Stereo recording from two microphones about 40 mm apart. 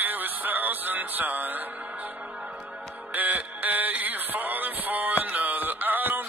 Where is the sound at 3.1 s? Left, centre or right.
Right.